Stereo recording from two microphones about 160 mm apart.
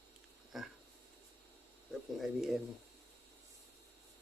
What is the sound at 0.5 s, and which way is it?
Speech, centre (ahead or behind).